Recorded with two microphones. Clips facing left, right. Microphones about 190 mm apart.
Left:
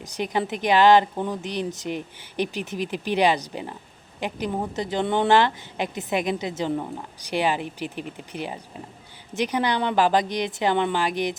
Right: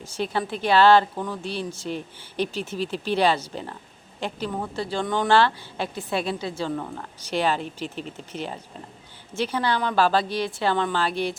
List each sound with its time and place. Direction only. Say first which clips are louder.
0.0 s speech: left 1 dB; 15° left (ahead or behind)